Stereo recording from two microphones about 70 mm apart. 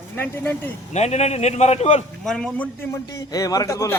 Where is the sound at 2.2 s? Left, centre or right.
Centre.